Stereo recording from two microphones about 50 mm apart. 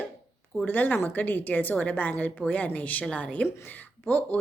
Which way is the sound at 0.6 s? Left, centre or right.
Left.